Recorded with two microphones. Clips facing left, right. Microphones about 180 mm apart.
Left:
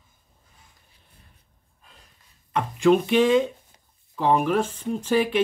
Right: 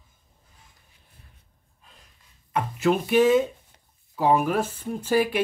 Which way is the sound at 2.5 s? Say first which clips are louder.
Left 4 dB; 5° right (ahead or behind).